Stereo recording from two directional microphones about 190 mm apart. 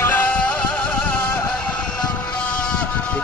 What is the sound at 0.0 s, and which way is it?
Music, 10° left (ahead or behind).